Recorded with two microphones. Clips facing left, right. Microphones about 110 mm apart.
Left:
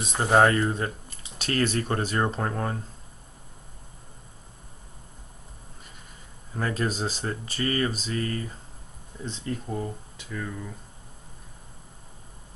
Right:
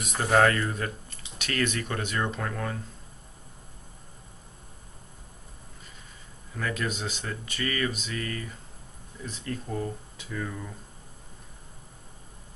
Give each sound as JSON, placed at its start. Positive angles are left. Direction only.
{"t": 0.0, "sound": "speech", "side_deg": 25}
{"t": 6.5, "sound": "speech", "side_deg": 35}
{"t": 9.7, "sound": "speech", "side_deg": 5}